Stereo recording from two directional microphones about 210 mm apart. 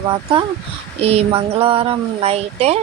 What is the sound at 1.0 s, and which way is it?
Speech, 30° right (ahead or behind).